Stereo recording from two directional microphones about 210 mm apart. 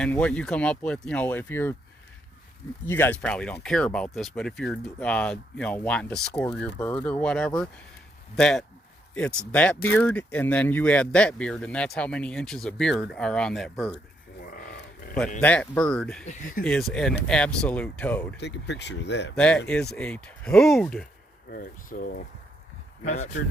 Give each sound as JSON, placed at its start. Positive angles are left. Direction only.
{"t": 0.0, "sound": "speech", "side_deg": 5}
{"t": 2.8, "sound": "speech", "side_deg": 10}
{"t": 14.4, "sound": "livestock", "side_deg": 45}
{"t": 15.4, "sound": "speech", "side_deg": 5}
{"t": 16.2, "sound": "speech", "side_deg": 35}
{"t": 16.6, "sound": "speech", "side_deg": 5}
{"t": 18.3, "sound": "speech", "side_deg": 55}
{"t": 19.4, "sound": "speech", "side_deg": 5}
{"t": 21.5, "sound": "speech", "side_deg": 40}